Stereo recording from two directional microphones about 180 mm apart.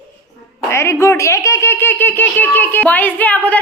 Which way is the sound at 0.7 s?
15° left (ahead or behind).